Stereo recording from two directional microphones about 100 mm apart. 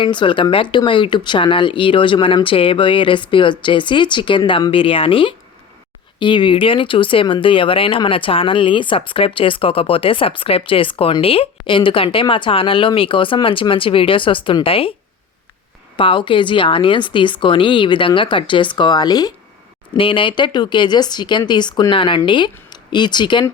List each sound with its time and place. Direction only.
0.0 s speech: 55° left (ahead or behind)
6.1 s speech: 55° left (ahead or behind)
16.0 s speech: 60° left (ahead or behind); by 19.3 s 45° left (ahead or behind)
20.0 s speech: 60° left (ahead or behind)